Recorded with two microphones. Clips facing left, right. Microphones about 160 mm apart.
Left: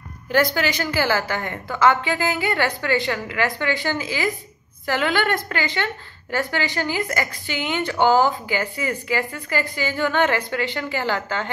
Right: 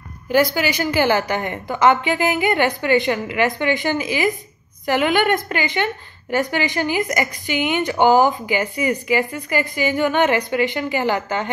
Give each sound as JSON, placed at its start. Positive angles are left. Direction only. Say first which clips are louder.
{"t": 0.6, "sound": "a woman's voice", "louder": "right 3 dB", "side_deg": -20}